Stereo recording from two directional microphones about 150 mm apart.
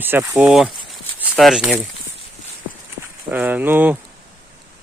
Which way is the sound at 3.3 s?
10° right (ahead or behind).